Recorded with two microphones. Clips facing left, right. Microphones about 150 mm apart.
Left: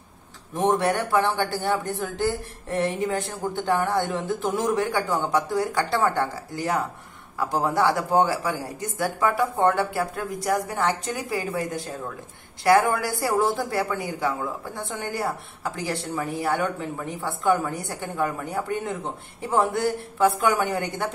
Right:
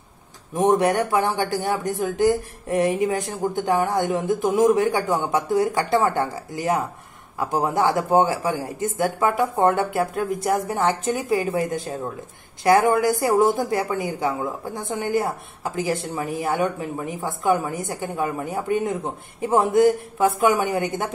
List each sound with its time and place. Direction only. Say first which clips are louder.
0.6 s speech: right 4 dB; 15° right (ahead or behind)